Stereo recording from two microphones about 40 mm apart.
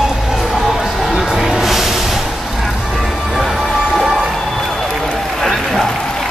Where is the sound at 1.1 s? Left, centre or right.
Centre.